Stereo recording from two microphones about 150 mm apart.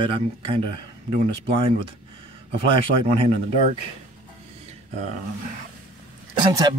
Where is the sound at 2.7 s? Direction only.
35° right (ahead or behind).